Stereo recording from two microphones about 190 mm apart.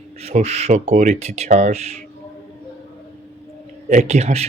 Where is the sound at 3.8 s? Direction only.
40° right (ahead or behind).